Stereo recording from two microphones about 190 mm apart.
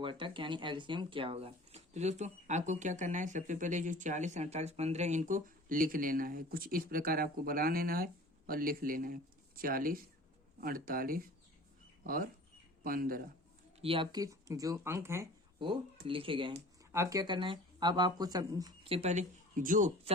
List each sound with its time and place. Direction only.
0.0 s speech: 25° right (ahead or behind); by 13.2 s 50° right (ahead or behind)
13.8 s speech: 25° right (ahead or behind)
15.5 s speech: 25° right (ahead or behind)
16.9 s speech: 15° right (ahead or behind)
18.9 s speech: 35° right (ahead or behind)